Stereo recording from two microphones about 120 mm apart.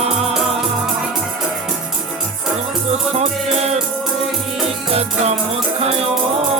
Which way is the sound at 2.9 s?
60° right (ahead or behind).